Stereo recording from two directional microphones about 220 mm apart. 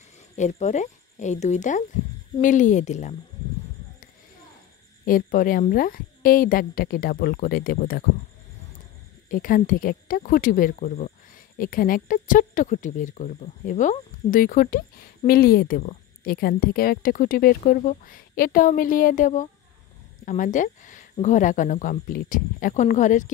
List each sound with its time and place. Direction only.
0.4 s speech: 30° left (ahead or behind)
5.0 s speech: 40° left (ahead or behind)
9.3 s speech: 40° left (ahead or behind)